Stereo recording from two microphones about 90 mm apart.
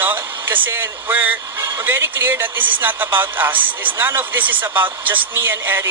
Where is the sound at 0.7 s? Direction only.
25° right (ahead or behind).